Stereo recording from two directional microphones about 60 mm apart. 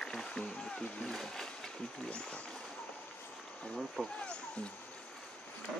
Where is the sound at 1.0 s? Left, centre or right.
Centre.